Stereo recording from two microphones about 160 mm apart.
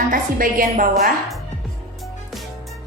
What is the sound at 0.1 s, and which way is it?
A woman's voice, 60° right (ahead or behind).